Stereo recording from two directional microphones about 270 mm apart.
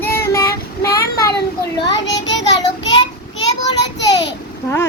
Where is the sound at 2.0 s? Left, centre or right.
Left.